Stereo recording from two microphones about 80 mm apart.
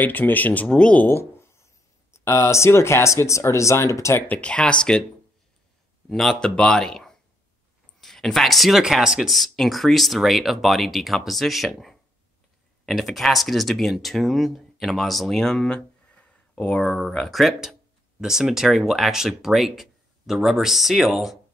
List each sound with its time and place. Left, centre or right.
0.0 s speech: left
1.0 s a sound: left
2.1 s speech: left
4.3 s speech: centre
6.0 s speech: centre
16.8 s speech: centre